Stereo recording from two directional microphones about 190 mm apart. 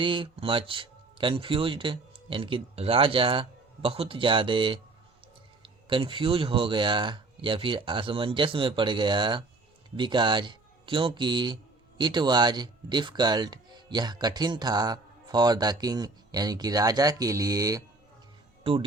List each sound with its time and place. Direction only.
0.0 s speech: 25° right (ahead or behind)
18.6 s speech: 30° right (ahead or behind)